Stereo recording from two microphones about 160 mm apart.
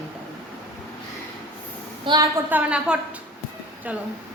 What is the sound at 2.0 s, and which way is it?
Speech, 25° right (ahead or behind).